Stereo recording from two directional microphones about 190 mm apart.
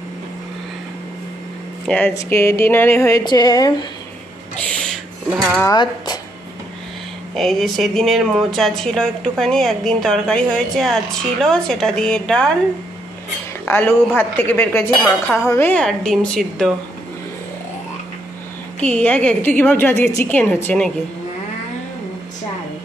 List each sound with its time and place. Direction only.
1.9 s a woman's voice: 5° left (ahead or behind)
4.6 s a sound: 5° left (ahead or behind)
5.6 s speech: 20° left (ahead or behind)
7.3 s speech: centre (ahead or behind)
13.7 s a woman's voice: 10° left (ahead or behind)
18.8 s a woman's voice: 5° left (ahead or behind)